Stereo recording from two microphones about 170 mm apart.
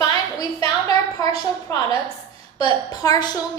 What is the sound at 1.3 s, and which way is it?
Speech, 35° right (ahead or behind).